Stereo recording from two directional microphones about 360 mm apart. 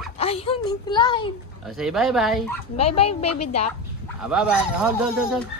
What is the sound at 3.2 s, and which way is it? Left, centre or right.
Speech, left.